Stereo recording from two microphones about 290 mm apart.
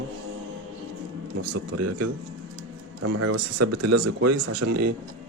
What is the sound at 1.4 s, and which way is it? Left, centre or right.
Speech, right.